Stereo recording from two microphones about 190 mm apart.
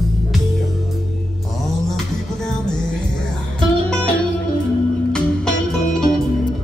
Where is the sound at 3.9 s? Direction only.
5° left (ahead or behind).